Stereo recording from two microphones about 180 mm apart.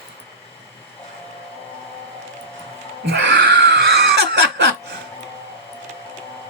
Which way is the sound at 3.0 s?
75° right (ahead or behind).